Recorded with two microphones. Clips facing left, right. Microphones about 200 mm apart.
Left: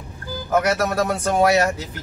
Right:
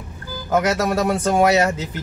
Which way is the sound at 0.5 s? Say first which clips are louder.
Right 1 dB; 25° right (ahead or behind).